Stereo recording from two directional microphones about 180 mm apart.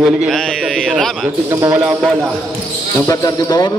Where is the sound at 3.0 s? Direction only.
20° left (ahead or behind).